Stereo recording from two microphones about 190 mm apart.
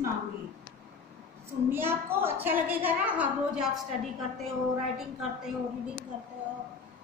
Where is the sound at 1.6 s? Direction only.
10° right (ahead or behind).